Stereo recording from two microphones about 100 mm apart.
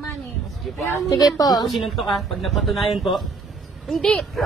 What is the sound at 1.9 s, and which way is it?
Speech, centre (ahead or behind).